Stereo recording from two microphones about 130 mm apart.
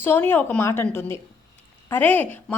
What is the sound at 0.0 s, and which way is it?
A woman's voice, 15° left (ahead or behind).